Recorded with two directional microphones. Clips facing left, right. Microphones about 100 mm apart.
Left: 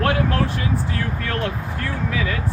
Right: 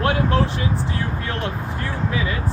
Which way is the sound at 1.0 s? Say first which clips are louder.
Left 1 dB; 20° right (ahead or behind).